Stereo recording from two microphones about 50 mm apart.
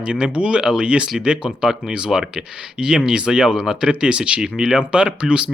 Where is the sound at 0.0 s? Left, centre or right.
Right.